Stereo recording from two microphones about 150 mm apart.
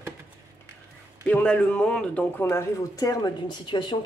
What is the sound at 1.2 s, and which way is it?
Speech, 10° left (ahead or behind).